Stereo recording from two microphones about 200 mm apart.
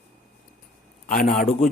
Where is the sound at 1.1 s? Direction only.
45° left (ahead or behind).